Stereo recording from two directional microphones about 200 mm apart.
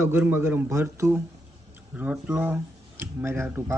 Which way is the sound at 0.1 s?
10° right (ahead or behind).